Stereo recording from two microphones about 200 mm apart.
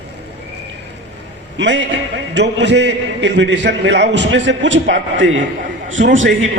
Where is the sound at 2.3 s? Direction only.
60° right (ahead or behind).